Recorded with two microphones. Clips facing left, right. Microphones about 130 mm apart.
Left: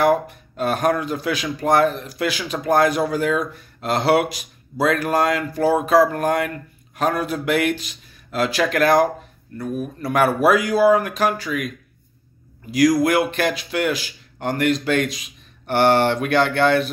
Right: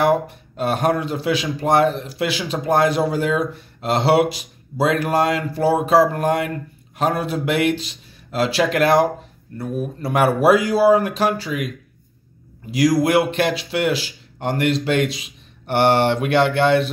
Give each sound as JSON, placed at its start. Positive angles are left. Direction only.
{"t": 0.6, "sound": "speech", "side_deg": -25}
{"t": 12.7, "sound": "speech", "side_deg": -25}